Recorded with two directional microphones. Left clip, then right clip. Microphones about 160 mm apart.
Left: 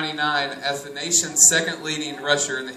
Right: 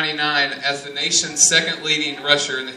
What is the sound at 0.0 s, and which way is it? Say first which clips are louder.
A man's voice: right 4 dB; 15° right (ahead or behind).